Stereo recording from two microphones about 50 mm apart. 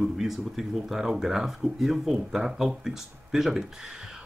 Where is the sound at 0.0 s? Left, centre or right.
Centre.